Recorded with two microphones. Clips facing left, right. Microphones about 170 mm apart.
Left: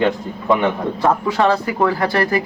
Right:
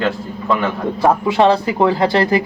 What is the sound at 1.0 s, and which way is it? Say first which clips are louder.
Speech: right 3 dB; 20° right (ahead or behind).